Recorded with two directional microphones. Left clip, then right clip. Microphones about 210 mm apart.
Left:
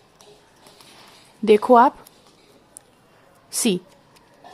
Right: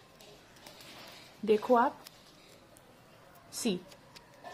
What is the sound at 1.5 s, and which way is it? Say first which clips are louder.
Speech: left 13 dB; 40° left (ahead or behind).